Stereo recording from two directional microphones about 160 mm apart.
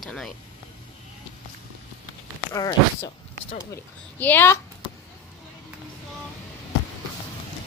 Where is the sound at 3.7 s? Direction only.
10° left (ahead or behind).